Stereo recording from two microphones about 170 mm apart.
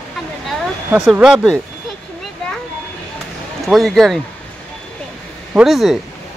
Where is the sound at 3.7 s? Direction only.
Centre (ahead or behind).